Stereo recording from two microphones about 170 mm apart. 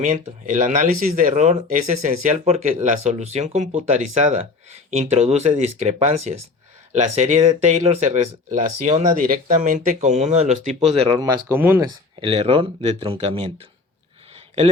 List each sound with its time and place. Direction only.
0.1 s speech: 50° right (ahead or behind)
11.2 s speech: 20° right (ahead or behind)
12.2 s speech: 30° right (ahead or behind)